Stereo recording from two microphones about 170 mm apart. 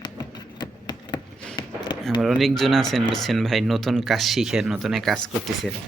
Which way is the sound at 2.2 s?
Centre (ahead or behind).